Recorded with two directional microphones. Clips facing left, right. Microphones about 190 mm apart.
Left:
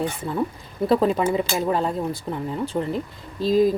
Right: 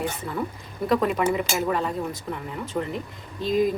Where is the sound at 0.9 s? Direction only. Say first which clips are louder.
Left 3 dB; 30° left (ahead or behind).